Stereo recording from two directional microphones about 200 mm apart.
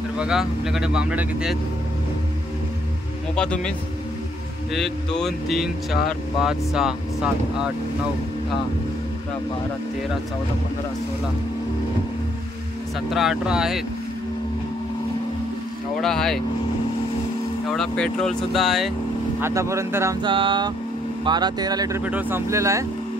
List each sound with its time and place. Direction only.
0.2 s speech: 5° right (ahead or behind)
3.3 s speech: 5° left (ahead or behind)
4.7 s speech: centre (ahead or behind)
13.1 s speech: centre (ahead or behind)
16.0 s speech: centre (ahead or behind)
17.6 s speech: 5° left (ahead or behind)
19.4 s speech: 15° right (ahead or behind)